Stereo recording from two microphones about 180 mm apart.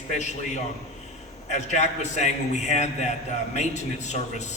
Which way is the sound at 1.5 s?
40° left (ahead or behind).